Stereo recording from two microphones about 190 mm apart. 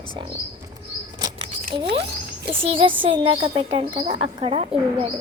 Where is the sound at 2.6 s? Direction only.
30° right (ahead or behind).